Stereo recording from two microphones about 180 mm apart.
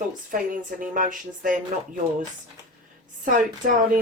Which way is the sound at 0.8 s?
50° right (ahead or behind).